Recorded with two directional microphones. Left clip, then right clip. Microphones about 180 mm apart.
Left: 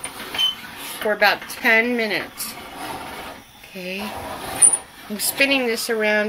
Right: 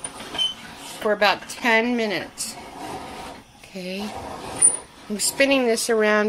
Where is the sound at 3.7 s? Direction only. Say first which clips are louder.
Left 2 dB; 35° right (ahead or behind).